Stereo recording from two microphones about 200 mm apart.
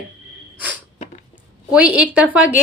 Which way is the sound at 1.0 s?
35° left (ahead or behind).